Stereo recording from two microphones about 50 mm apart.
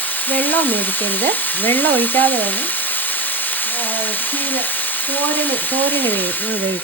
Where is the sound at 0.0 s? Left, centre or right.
Left.